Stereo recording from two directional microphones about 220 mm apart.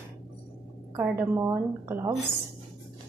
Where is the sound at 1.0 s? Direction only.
10° right (ahead or behind).